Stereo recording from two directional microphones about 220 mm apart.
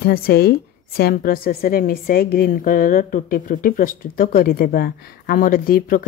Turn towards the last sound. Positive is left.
turn(degrees=40)  # may be behind; listen again after turning